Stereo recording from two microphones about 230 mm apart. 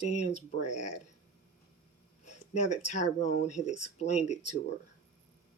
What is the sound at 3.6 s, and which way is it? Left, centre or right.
Speech, left.